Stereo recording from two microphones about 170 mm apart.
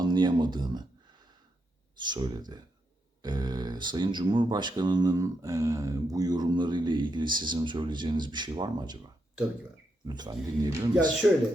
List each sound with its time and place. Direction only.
0.0 s speech: 25° right (ahead or behind)
2.0 s speech: 25° right (ahead or behind)
10.1 s speech: 25° right (ahead or behind)
11.2 s speech: 5° right (ahead or behind)